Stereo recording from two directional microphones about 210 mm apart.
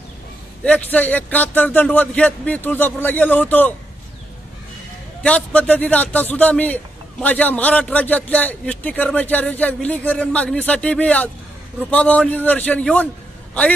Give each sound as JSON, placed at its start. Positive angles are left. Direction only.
{"t": 0.7, "sound": "a man's voice", "side_deg": 5}
{"t": 5.2, "sound": "a man's voice", "side_deg": 5}